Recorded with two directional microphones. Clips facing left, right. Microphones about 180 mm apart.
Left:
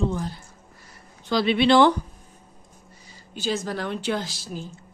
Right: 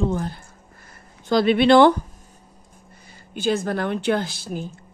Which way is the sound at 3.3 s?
55° right (ahead or behind).